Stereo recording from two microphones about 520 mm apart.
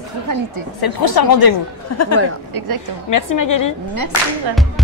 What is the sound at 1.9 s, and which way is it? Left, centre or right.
Speech, left.